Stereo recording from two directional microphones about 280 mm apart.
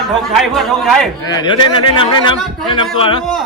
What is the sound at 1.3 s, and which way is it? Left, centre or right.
A man's voice, centre.